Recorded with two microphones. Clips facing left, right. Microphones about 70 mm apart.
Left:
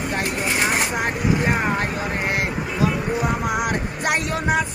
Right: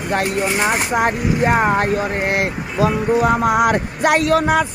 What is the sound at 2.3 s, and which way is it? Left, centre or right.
Speech, right.